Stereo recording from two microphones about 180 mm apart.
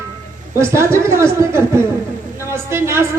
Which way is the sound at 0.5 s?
15° right (ahead or behind).